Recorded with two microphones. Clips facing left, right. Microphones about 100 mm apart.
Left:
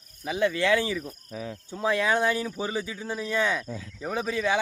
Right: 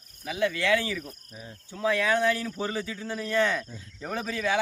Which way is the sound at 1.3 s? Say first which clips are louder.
Left 13 dB; 90° left.